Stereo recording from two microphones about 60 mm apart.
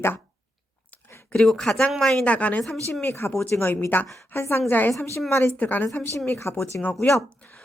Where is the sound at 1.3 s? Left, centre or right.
Centre.